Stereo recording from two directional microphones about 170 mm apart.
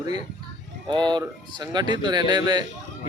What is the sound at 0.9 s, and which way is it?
Speech, 25° right (ahead or behind).